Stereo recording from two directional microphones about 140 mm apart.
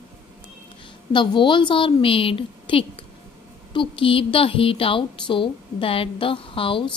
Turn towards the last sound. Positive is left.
turn(degrees=40)  # may be behind; listen again after turning